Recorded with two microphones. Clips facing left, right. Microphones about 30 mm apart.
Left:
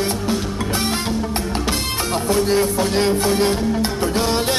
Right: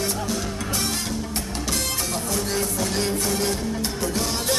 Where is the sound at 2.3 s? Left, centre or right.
Left.